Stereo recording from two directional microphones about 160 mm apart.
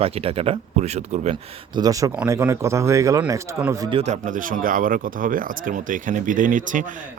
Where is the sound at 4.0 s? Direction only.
50° right (ahead or behind).